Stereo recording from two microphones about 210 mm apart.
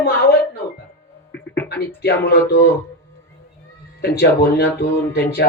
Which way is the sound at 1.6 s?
50° left (ahead or behind).